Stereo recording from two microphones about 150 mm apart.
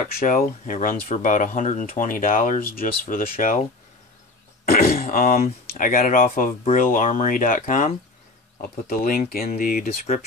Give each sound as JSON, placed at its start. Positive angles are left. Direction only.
{"t": 0.1, "sound": "speech", "side_deg": 70}
{"t": 4.6, "sound": "speech", "side_deg": 75}
{"t": 10.1, "sound": "speech", "side_deg": 45}